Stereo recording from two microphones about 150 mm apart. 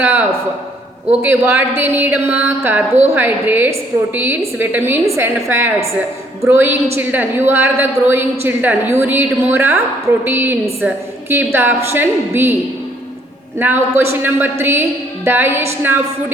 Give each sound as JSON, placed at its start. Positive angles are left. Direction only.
{"t": 0.0, "sound": "a man's voice", "side_deg": -15}
{"t": 13.6, "sound": "a woman's voice", "side_deg": -15}